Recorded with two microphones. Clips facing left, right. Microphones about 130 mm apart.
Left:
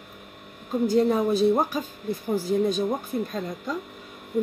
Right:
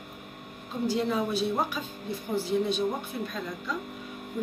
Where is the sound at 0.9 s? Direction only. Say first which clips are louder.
Left 6 dB; 45° left (ahead or behind).